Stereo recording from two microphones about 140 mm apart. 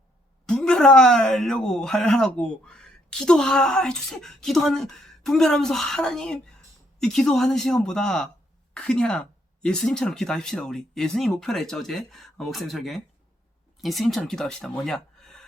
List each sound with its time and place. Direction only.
0.4 s speech: 5° left (ahead or behind)